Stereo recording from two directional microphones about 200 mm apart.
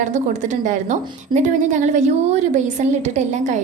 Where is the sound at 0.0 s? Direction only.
40° right (ahead or behind).